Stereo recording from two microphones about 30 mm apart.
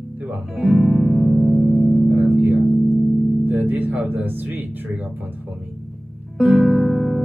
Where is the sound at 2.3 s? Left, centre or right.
Right.